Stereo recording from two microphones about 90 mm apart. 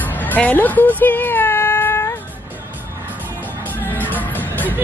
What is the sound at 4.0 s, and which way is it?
Music, 20° left (ahead or behind).